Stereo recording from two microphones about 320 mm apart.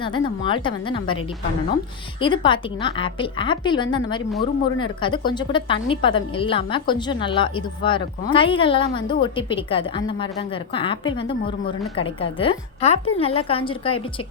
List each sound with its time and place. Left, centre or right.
0.0 s a woman's voice: centre
2.2 s a woman's voice: centre